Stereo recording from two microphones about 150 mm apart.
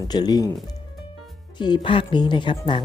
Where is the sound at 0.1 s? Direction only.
25° left (ahead or behind).